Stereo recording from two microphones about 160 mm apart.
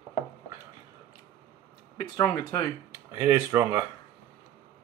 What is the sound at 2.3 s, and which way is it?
Speech, 20° left (ahead or behind).